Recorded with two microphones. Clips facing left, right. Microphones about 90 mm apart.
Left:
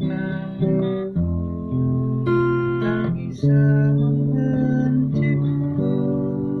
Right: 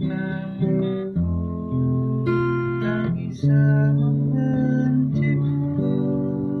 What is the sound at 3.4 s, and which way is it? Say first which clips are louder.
Music: left 2 dB; centre (ahead or behind).